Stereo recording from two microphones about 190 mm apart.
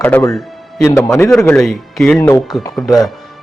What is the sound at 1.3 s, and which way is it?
Speech, 5° left (ahead or behind).